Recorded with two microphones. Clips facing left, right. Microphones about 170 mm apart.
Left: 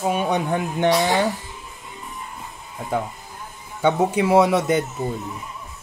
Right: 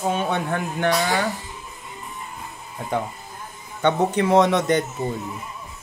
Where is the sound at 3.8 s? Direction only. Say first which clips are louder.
Left 1 dB; 10° left (ahead or behind).